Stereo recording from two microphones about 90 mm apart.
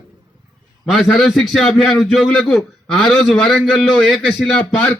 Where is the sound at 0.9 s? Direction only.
Centre (ahead or behind).